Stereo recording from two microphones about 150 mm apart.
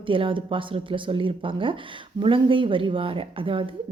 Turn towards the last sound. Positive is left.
turn(degrees=-35)  # may be behind; listen again after turning